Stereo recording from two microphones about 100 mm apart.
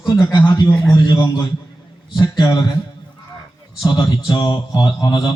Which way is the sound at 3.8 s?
45° left (ahead or behind).